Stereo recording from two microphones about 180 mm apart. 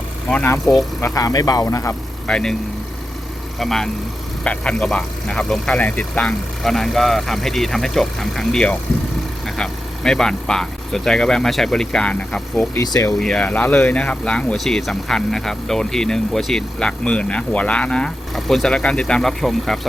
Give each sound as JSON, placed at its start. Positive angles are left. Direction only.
{"t": 0.3, "sound": "speech", "side_deg": 10}
{"t": 1.0, "sound": "speech", "side_deg": 20}
{"t": 2.2, "sound": "speech", "side_deg": 5}
{"t": 3.6, "sound": "speech", "side_deg": 0}
{"t": 13.1, "sound": "speech", "side_deg": 5}